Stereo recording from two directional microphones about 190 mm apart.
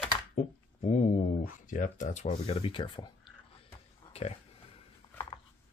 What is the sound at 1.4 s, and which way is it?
Speech, 45° left (ahead or behind).